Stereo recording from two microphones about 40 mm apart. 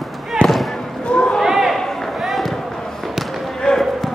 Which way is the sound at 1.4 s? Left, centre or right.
Centre.